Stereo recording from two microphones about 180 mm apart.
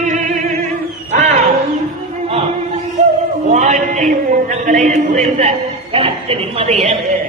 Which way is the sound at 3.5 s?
40° right (ahead or behind).